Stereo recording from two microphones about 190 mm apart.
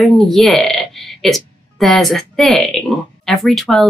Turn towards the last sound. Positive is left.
turn(degrees=0)  # may be behind; listen again after turning